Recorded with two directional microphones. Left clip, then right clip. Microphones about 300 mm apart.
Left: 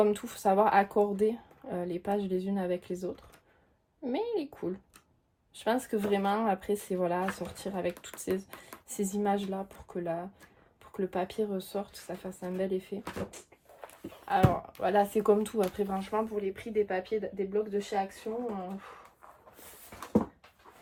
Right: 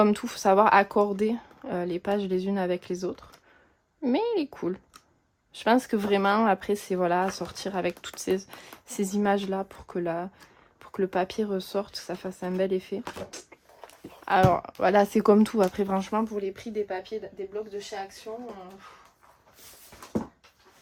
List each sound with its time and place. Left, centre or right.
0.0 s speech: right; by 18.3 s centre